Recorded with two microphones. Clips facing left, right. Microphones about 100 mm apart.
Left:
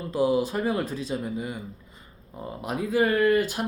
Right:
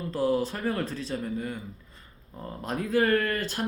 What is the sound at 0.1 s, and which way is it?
A man's voice, 15° left (ahead or behind).